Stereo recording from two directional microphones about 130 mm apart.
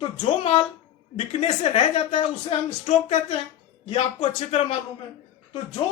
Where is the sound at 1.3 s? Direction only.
60° left (ahead or behind).